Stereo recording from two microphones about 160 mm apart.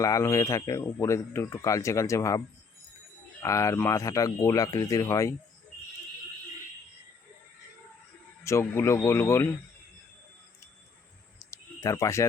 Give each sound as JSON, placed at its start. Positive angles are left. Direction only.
{"t": 0.0, "sound": "speech", "side_deg": 20}
{"t": 3.4, "sound": "speech", "side_deg": 20}
{"t": 8.4, "sound": "speech", "side_deg": 15}
{"t": 11.3, "sound": "a sound", "side_deg": 20}